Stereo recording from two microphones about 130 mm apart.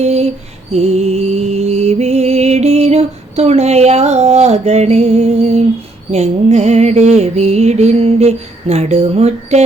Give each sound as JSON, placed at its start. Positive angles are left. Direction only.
{"t": 0.0, "sound": "mantra", "side_deg": -55}
{"t": 0.7, "sound": "music", "side_deg": -55}
{"t": 6.1, "sound": "mantra", "side_deg": -60}